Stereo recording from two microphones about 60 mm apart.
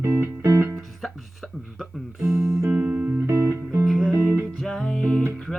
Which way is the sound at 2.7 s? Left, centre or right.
Right.